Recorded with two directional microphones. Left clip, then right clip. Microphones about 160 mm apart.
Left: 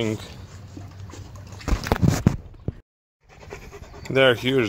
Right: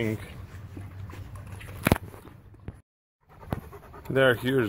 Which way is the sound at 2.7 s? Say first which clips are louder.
Left 11 dB; 35° right (ahead or behind).